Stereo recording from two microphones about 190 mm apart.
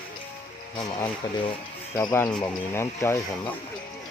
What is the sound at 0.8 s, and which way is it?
Speech, 20° left (ahead or behind).